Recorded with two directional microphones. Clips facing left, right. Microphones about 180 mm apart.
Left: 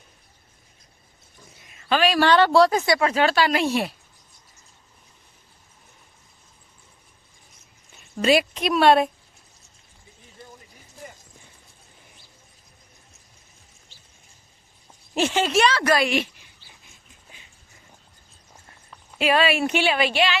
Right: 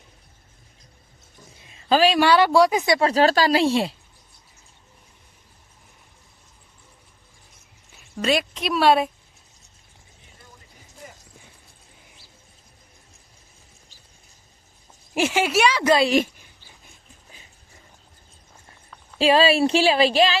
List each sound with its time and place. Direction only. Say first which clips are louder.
1.6 s a sound: right 3 dB; 30° right (ahead or behind)
2.1 s speech: left 4 dB; 10° right (ahead or behind)
3.1 s speech: right 3 dB; 35° right (ahead or behind)
7.9 s a woman's voice: left 3 dB; centre (ahead or behind)
15.1 s speech: even; 10° right (ahead or behind)
15.8 s a woman's voice: right 3 dB; 20° right (ahead or behind)
16.0 s speech: right 4 dB; 45° right (ahead or behind)
19.2 s speech: right 4 dB; 30° right (ahead or behind)